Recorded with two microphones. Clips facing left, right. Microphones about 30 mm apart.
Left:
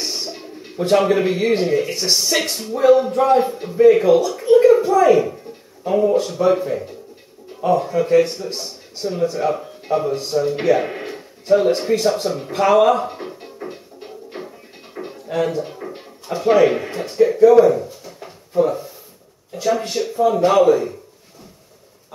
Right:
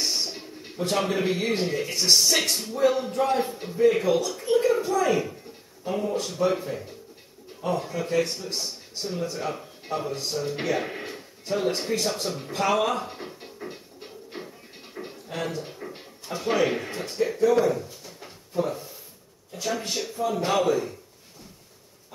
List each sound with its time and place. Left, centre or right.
0.0 s a sound: centre
0.7 s speech: centre
13.4 s music: centre
15.0 s music: left
15.3 s speech: centre
17.6 s a sound: centre
18.6 s speech: centre